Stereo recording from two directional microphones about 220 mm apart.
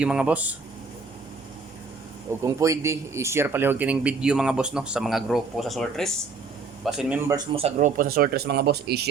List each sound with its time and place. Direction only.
0.0 s speech: 5° right (ahead or behind)
2.4 s speech: 15° right (ahead or behind)
7.3 s speech: 20° right (ahead or behind); by 9.0 s 45° right (ahead or behind)